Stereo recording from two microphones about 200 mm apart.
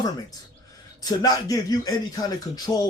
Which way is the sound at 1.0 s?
20° left (ahead or behind).